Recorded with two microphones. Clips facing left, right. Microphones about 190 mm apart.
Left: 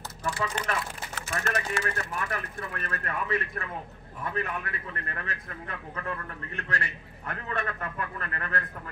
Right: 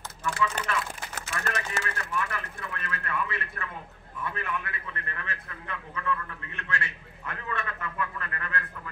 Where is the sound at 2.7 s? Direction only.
40° left (ahead or behind).